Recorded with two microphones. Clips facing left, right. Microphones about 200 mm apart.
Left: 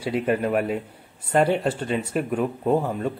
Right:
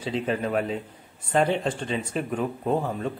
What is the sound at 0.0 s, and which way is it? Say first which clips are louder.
Speech: left 4 dB; 10° left (ahead or behind).